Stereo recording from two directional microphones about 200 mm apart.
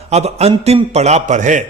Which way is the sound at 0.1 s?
30° right (ahead or behind).